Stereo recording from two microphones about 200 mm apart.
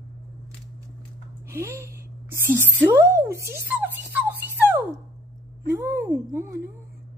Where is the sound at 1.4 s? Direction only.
15° right (ahead or behind).